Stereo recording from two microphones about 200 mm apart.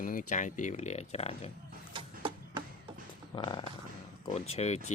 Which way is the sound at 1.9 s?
25° right (ahead or behind).